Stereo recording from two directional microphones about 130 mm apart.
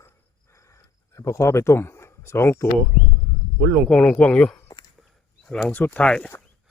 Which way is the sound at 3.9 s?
5° left (ahead or behind).